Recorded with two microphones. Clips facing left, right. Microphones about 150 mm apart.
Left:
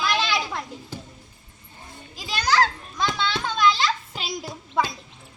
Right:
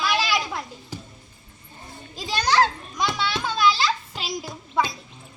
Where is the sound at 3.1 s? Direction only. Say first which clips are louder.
Even; 10° right (ahead or behind).